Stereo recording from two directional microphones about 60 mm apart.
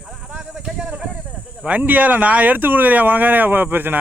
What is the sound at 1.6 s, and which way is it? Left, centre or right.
Speech, right.